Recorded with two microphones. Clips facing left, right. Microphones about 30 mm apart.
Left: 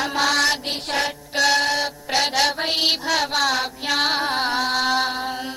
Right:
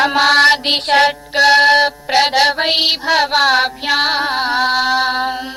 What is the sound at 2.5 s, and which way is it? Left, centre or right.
Music, right.